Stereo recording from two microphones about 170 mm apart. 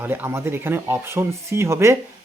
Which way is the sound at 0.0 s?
10° right (ahead or behind).